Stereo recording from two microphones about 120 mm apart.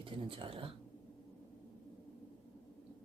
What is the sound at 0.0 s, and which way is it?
Speech, 45° right (ahead or behind).